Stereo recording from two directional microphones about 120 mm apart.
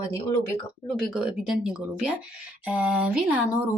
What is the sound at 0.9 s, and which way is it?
Speech, centre (ahead or behind).